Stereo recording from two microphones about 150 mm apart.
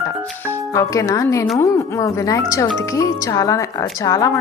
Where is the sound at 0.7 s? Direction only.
20° left (ahead or behind).